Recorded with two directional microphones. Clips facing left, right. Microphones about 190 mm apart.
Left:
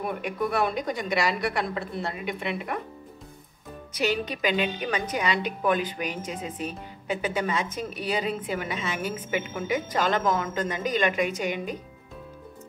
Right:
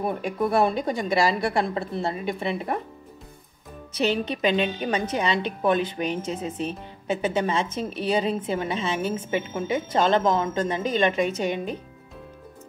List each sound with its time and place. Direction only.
0.0 s a woman's voice: 30° right (ahead or behind)
3.9 s a woman's voice: 25° right (ahead or behind)